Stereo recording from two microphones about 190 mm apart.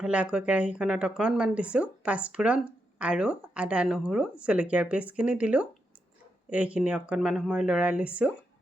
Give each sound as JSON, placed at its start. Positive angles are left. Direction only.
{"t": 0.0, "sound": "speech", "side_deg": -5}